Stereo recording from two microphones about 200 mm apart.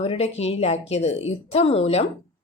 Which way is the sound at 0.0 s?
30° left (ahead or behind).